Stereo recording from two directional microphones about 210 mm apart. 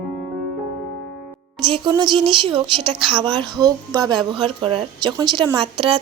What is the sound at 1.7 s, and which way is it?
A woman's voice, 20° right (ahead or behind).